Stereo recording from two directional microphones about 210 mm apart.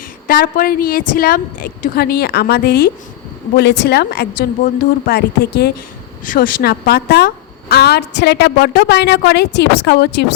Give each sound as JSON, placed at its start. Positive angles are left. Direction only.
{"t": 0.3, "sound": "a woman's voice", "side_deg": 40}